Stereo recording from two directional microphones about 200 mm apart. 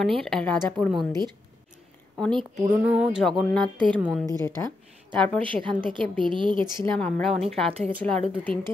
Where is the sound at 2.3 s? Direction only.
25° right (ahead or behind).